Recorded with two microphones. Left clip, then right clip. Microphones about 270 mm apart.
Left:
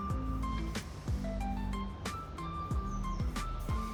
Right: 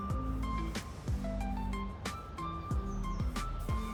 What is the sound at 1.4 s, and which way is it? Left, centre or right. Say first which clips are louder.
Music: even; centre.